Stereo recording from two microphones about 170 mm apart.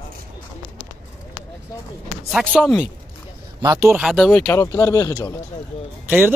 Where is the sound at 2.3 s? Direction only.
5° left (ahead or behind).